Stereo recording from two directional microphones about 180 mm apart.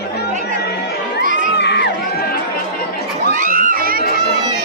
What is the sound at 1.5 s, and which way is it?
Crowd, 70° left (ahead or behind).